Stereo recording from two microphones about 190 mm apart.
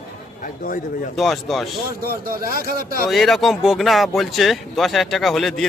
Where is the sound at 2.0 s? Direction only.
50° right (ahead or behind).